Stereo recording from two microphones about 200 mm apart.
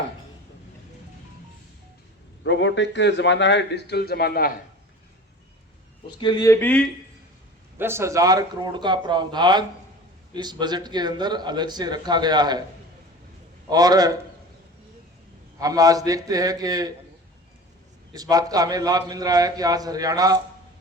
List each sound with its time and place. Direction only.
2.4 s a man's voice: 65° left (ahead or behind)
6.1 s speech: 20° left (ahead or behind)
7.8 s a man's voice: 10° right (ahead or behind)
13.7 s a man's voice: 20° right (ahead or behind)
15.5 s a man's voice: 15° right (ahead or behind)
18.1 s a man's voice: 20° right (ahead or behind)